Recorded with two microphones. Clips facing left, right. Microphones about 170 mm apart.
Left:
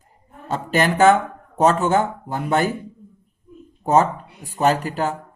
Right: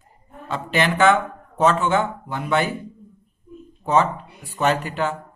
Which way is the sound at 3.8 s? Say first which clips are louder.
Left 2 dB; 45° left (ahead or behind).